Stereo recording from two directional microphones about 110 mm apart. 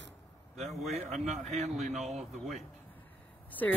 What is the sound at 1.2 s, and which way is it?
Speech, 90° right.